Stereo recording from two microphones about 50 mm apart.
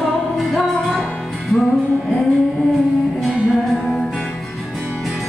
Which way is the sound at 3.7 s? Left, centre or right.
Centre.